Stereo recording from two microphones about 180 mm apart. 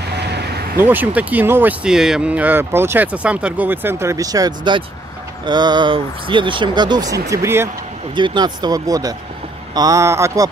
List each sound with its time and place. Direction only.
0.1 s vehicle: 65° right (ahead or behind)
0.7 s speech: 10° right (ahead or behind)